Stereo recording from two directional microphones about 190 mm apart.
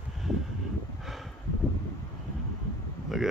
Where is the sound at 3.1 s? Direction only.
Centre (ahead or behind).